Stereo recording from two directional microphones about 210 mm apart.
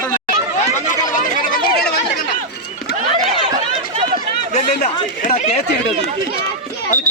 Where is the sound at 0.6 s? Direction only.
35° left (ahead or behind).